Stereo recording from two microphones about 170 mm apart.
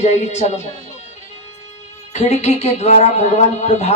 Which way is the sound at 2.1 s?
40° left (ahead or behind).